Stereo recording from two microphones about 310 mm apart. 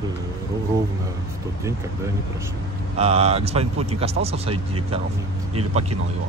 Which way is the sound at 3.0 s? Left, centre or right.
Centre.